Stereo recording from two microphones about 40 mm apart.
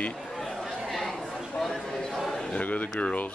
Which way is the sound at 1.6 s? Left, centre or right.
Centre.